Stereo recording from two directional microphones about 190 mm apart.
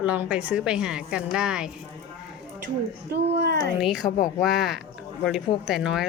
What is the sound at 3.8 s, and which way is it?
A woman's voice, centre (ahead or behind).